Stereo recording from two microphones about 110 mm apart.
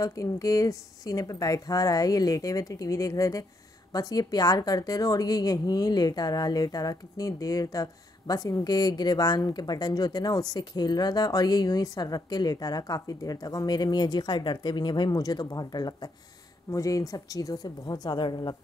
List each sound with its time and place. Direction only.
0.0 s a woman's voice: 30° left (ahead or behind)